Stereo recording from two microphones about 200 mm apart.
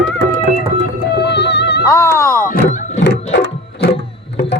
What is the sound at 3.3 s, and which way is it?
Music, 55° left (ahead or behind).